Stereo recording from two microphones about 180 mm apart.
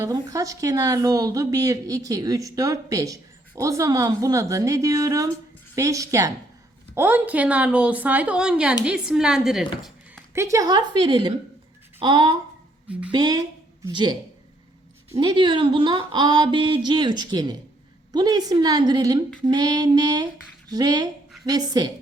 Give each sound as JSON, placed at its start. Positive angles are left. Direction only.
{"t": 0.0, "sound": "a woman's voice", "side_deg": -20}
{"t": 10.3, "sound": "a woman's voice", "side_deg": -15}